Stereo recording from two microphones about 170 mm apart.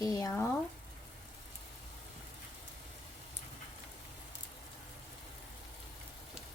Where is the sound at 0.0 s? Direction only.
20° left (ahead or behind).